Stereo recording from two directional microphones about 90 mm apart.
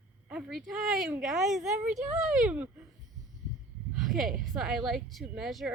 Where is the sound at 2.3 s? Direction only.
15° right (ahead or behind).